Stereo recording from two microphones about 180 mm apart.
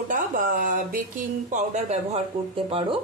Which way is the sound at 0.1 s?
45° right (ahead or behind).